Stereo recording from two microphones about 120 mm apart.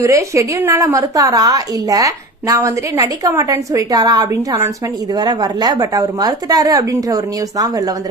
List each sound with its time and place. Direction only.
0.0 s a woman's voice: 25° right (ahead or behind)